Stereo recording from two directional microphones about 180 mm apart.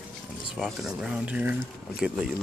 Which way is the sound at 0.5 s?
Centre (ahead or behind).